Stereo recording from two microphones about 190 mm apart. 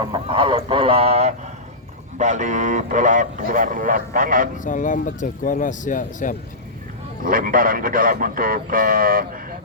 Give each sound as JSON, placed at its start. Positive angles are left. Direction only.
{"t": 0.0, "sound": "speech", "side_deg": -25}
{"t": 4.5, "sound": "speech", "side_deg": 40}
{"t": 7.3, "sound": "speech", "side_deg": -45}